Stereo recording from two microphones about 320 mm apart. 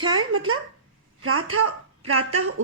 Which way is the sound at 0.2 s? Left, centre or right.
Right.